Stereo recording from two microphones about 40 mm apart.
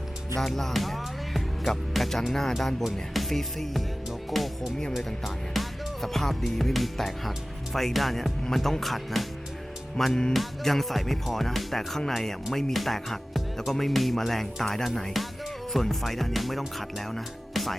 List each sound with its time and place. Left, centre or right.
0.3 s speech: centre
4.3 s music: centre
8.4 s speech: centre
10.0 s music: centre
10.3 s speech: centre